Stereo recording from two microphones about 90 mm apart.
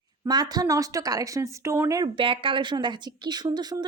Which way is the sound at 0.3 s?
50° right (ahead or behind).